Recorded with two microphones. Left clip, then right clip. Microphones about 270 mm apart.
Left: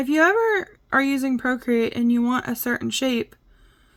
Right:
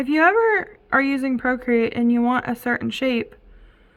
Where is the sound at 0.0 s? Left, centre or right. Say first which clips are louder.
Right 2 dB; centre.